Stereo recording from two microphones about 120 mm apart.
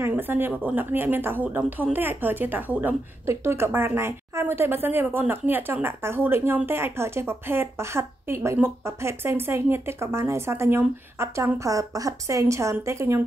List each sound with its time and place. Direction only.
0.0 s a woman's voice: 15° right (ahead or behind)